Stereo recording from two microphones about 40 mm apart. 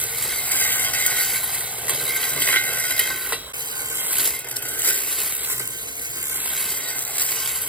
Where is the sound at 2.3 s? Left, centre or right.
Left.